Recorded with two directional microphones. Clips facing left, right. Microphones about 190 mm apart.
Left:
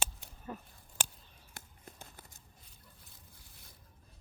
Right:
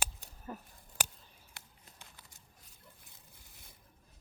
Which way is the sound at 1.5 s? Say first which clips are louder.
Left 8 dB; 50° left (ahead or behind).